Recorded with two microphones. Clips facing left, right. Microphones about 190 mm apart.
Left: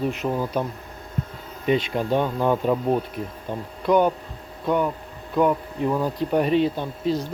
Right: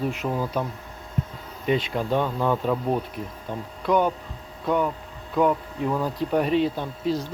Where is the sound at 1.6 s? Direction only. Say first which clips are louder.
Left 2 dB; centre (ahead or behind).